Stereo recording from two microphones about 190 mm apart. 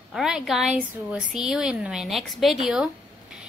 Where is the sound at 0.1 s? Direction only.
Centre (ahead or behind).